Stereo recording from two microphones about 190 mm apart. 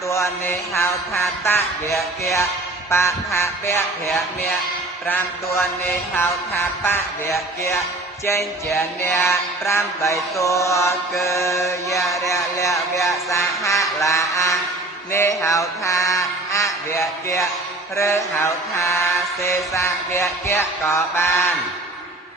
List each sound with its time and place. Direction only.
0.1 s music: 15° left (ahead or behind)
6.8 s music: 15° left (ahead or behind)